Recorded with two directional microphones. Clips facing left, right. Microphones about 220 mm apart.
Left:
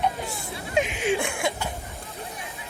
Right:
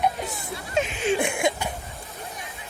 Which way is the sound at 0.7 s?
15° left (ahead or behind).